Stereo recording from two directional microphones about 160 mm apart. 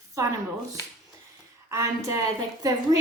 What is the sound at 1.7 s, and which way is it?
Speech, 20° right (ahead or behind).